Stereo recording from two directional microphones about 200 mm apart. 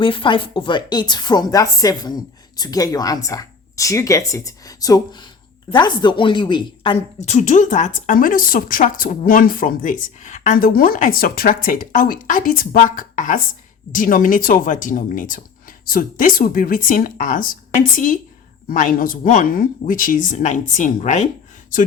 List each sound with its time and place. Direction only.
0.0 s a woman's voice: 25° left (ahead or behind)